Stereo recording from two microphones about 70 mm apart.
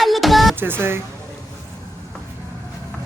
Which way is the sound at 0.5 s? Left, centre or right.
Right.